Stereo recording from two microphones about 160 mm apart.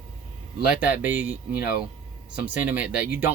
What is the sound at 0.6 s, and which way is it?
Speech, 5° right (ahead or behind).